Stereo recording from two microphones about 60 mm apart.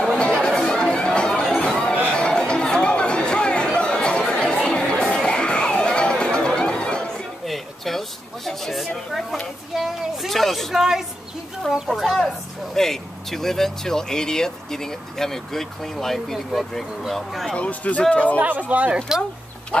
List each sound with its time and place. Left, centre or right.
0.1 s chatter: centre
4.6 s music: centre
7.4 s a sound: centre
12.7 s speech: centre
17.6 s speech: left
18.4 s speech: right
19.7 s speech: centre